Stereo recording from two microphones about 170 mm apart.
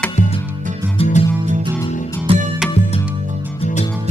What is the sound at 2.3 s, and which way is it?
Music, 35° right (ahead or behind).